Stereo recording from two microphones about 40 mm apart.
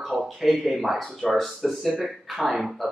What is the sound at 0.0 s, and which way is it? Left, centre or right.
A man's voice, centre.